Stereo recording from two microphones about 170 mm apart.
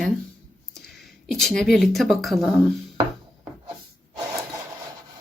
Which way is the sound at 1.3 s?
Centre (ahead or behind).